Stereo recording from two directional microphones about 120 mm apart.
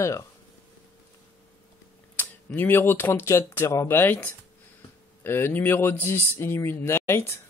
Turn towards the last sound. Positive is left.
turn(degrees=20)  # may be behind; listen again after turning